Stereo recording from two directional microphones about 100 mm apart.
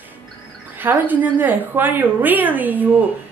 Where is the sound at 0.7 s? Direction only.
20° right (ahead or behind).